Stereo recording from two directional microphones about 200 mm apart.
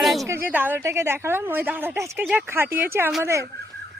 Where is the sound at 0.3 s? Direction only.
10° right (ahead or behind).